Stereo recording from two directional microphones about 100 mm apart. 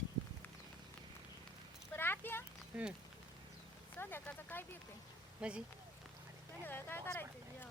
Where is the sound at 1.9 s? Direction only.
20° left (ahead or behind).